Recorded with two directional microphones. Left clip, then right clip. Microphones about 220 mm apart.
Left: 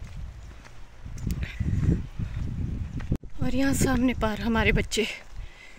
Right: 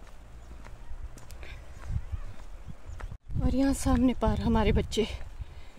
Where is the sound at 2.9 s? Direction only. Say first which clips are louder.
Left 6 dB; 10° right (ahead or behind).